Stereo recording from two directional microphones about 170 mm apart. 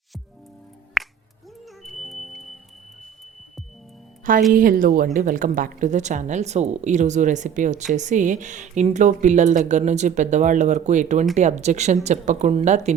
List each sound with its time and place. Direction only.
1.0 s finger snapping: centre (ahead or behind)
1.8 s music: centre (ahead or behind)
4.5 s a woman's voice: 55° right (ahead or behind)